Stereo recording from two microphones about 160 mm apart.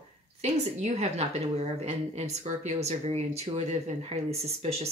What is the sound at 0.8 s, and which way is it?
Speech, 40° right (ahead or behind).